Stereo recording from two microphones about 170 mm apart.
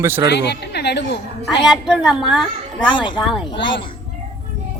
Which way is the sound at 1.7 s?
5° right (ahead or behind).